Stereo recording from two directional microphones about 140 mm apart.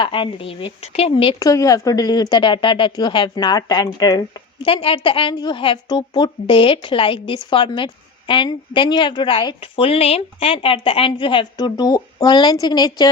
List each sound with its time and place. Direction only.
0.0 s speech: 35° left (ahead or behind)
1.4 s speech: 25° left (ahead or behind)